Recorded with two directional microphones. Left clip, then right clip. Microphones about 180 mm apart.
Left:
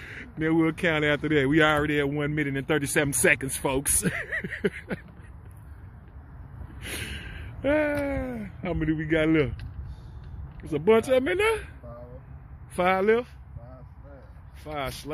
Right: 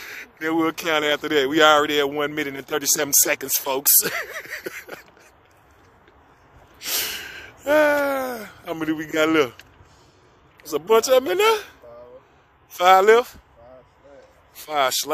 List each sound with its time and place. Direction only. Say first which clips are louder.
0.0 s speech: right 2 dB; 15° right (ahead or behind)
6.8 s speech: right 9 dB; 30° right (ahead or behind)
10.6 s speech: right 2 dB; 30° right (ahead or behind)
11.0 s speech: right 6 dB; 20° right (ahead or behind)
12.7 s speech: right 9 dB; 30° right (ahead or behind)
14.7 s speech: right 12 dB; 50° right (ahead or behind)